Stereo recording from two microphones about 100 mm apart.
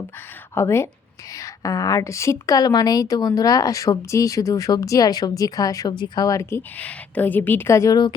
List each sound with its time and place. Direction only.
0.5 s a woman's voice: 25° left (ahead or behind); by 6.2 s 45° left (ahead or behind)
6.2 s a woman's voice: 30° left (ahead or behind)